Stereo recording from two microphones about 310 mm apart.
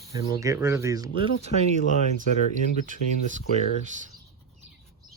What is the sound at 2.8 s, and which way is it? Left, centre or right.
Speech, right.